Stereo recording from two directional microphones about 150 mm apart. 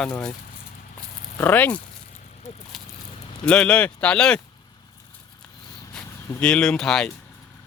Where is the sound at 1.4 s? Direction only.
10° left (ahead or behind).